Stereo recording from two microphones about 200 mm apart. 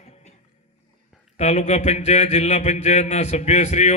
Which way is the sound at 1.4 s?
35° left (ahead or behind).